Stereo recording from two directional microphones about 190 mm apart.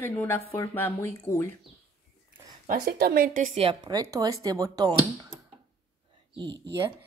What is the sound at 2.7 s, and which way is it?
A woman's voice, 55° right (ahead or behind).